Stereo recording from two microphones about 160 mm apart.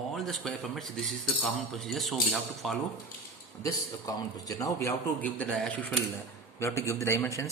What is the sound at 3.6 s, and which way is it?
A man's voice, 20° left (ahead or behind).